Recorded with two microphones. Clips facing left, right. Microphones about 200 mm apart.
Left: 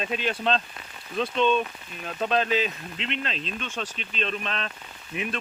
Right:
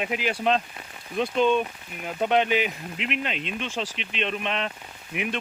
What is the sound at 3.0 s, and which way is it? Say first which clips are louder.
Speech: right 2 dB; 30° left (ahead or behind).